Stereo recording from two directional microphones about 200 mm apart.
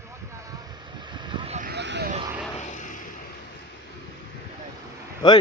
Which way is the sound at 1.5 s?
50° right (ahead or behind).